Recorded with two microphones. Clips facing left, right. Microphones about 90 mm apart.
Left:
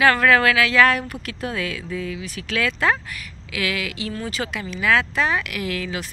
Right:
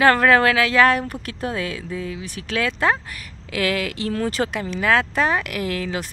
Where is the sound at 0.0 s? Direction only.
35° right (ahead or behind).